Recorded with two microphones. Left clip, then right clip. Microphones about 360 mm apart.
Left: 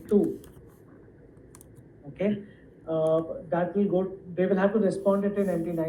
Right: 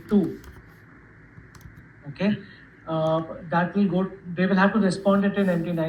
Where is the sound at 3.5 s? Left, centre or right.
Centre.